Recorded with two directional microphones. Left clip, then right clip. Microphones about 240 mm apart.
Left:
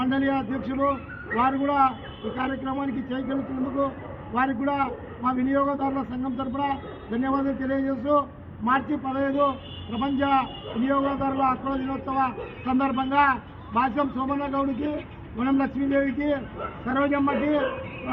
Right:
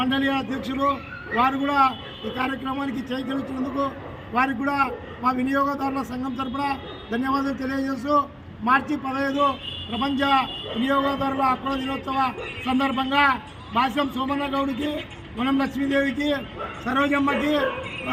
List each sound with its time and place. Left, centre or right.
0.0 s a man's voice: centre
4.4 s a man's voice: centre
11.7 s a man's voice: right